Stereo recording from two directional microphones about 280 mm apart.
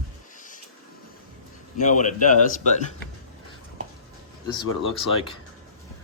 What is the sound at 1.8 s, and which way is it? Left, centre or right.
Speech, left.